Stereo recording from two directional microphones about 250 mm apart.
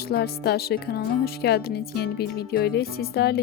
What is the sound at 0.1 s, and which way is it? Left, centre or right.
Speech, left.